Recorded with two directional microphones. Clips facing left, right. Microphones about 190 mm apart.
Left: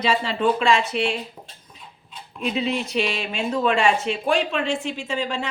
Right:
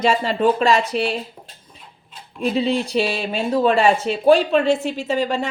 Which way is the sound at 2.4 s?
35° right (ahead or behind).